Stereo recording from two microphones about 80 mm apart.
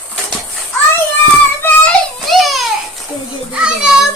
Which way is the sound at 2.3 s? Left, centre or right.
Centre.